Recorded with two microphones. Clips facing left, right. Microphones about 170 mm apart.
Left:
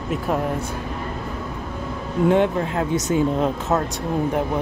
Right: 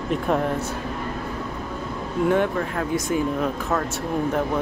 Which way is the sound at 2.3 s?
20° left (ahead or behind).